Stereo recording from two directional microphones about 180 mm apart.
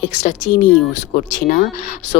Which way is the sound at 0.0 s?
40° left (ahead or behind).